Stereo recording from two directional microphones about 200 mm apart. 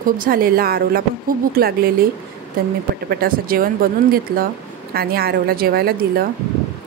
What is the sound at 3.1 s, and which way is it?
A woman's voice, 45° right (ahead or behind).